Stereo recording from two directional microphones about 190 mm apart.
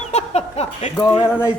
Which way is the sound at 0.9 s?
20° left (ahead or behind).